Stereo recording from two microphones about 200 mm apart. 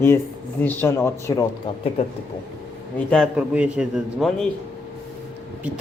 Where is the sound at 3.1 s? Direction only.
Centre (ahead or behind).